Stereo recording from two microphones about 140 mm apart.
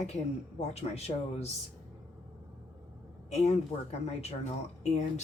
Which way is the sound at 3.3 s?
50° left (ahead or behind).